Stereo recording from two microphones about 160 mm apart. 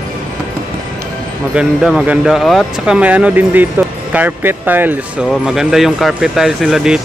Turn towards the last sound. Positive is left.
turn(degrees=-5)  # may be behind; listen again after turning